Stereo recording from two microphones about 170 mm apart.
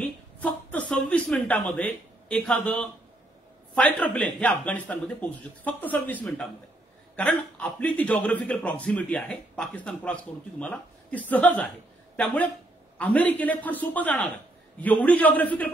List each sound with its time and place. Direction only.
0.0 s a man's voice: 10° left (ahead or behind)
12.9 s a man's voice: 10° left (ahead or behind)